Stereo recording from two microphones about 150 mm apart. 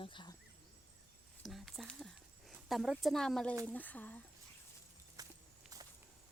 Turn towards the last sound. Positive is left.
turn(degrees=-25)  # may be behind; listen again after turning